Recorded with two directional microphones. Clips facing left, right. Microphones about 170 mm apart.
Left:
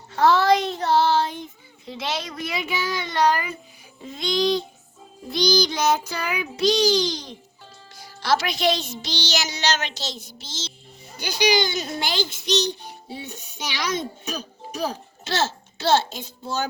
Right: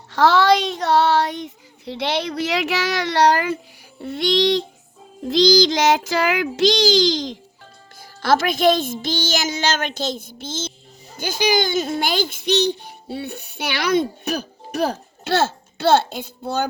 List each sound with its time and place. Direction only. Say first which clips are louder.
0.1 s child singing: right 2 dB; 80° right
4.0 s child singing: right 4 dB; 70° right (ahead or behind)
5.3 s child singing: right 6 dB; 90° right
8.2 s a child's voice: right 5 dB; 50° right (ahead or behind)